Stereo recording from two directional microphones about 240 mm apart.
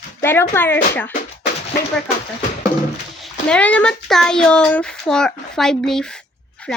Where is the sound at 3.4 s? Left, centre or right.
Centre.